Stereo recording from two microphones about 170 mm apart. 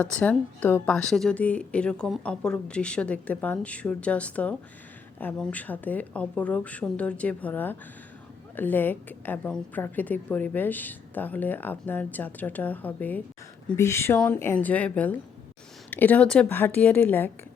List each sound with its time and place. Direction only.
0.0 s a woman's voice: 10° left (ahead or behind)